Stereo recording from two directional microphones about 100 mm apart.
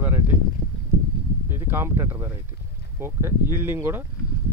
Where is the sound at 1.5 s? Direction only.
25° right (ahead or behind).